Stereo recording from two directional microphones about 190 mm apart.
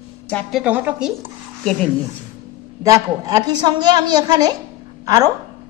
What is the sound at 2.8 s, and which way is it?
A woman's voice, 20° right (ahead or behind).